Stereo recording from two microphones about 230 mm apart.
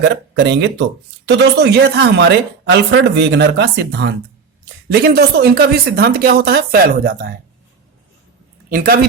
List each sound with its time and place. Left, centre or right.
0.0 s speech: right
8.7 s speech: right